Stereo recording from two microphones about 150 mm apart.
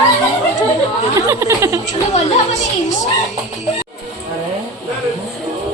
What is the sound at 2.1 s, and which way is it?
Speech, 50° left (ahead or behind).